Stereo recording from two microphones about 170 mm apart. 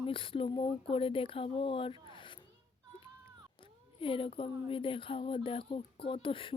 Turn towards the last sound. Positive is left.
turn(degrees=30)  # may be behind; listen again after turning